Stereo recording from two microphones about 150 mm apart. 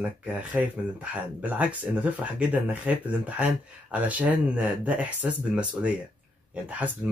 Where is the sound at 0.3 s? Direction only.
10° right (ahead or behind).